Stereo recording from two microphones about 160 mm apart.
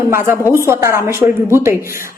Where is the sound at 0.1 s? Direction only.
15° right (ahead or behind).